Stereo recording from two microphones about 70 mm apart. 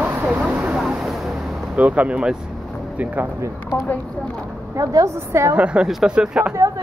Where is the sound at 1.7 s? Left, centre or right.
Right.